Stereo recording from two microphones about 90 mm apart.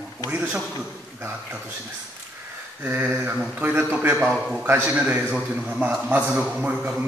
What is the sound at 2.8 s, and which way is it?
A man's voice, 20° right (ahead or behind).